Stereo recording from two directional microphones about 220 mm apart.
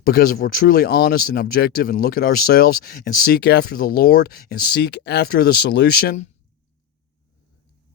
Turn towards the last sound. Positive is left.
turn(degrees=45)  # may be behind; listen again after turning